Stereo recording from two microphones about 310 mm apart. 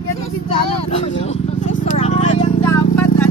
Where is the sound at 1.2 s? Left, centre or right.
Left.